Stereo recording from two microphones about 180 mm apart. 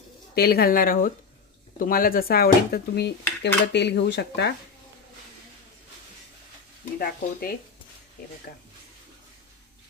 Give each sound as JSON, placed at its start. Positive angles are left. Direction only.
{"t": 0.3, "sound": "speech", "side_deg": 60}
{"t": 1.8, "sound": "dishes", "side_deg": 55}
{"t": 7.0, "sound": "speech", "side_deg": 55}